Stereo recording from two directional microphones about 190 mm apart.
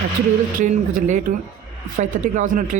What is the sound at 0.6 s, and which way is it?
A man's voice, 40° right (ahead or behind).